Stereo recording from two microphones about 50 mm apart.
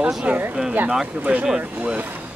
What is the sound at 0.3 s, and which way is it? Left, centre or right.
Speech, right.